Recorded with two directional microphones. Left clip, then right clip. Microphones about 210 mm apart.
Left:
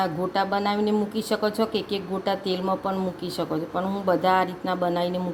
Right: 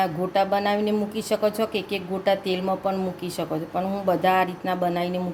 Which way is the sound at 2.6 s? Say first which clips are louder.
Right 1 dB; 5° right (ahead or behind).